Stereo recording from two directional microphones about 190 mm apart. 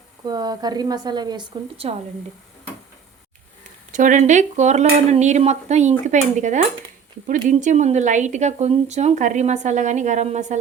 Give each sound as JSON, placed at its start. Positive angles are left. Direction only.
{"t": 0.3, "sound": "a woman's voice", "side_deg": -20}
{"t": 3.9, "sound": "speech", "side_deg": -40}